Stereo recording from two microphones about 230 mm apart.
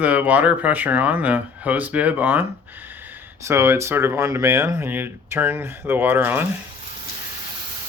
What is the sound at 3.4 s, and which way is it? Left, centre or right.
Speech, centre.